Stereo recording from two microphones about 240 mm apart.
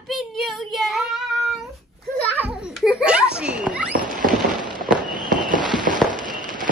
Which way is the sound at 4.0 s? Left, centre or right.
Right.